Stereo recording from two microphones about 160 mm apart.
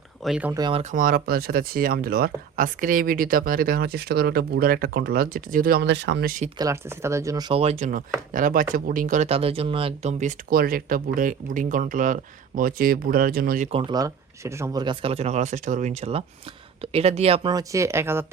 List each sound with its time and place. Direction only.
0.2 s speech: 5° right (ahead or behind)
0.7 s speech: 40° right (ahead or behind)
0.9 s speech: 65° right (ahead or behind); by 6.3 s 90° right
6.6 s speech: 20° right (ahead or behind)
7.5 s speech: 40° right (ahead or behind); by 13.7 s 70° right (ahead or behind)
13.7 s speech: 35° right (ahead or behind)
13.9 s speech: 20° right (ahead or behind); by 17.5 s 40° right (ahead or behind)
17.5 s speech: 20° right (ahead or behind)